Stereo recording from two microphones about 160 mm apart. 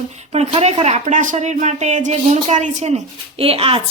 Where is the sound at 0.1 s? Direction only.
45° right (ahead or behind).